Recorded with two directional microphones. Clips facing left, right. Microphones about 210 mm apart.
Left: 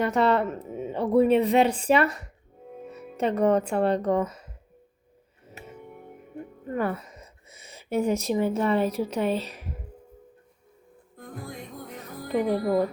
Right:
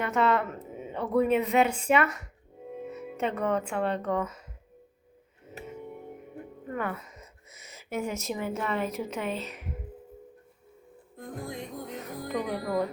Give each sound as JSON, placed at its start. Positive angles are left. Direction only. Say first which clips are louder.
{"t": 0.0, "sound": "speech", "louder": "left 4 dB", "side_deg": 35}
{"t": 6.7, "sound": "speech", "louder": "left 5 dB", "side_deg": 35}
{"t": 12.3, "sound": "speech", "louder": "left 7 dB", "side_deg": 30}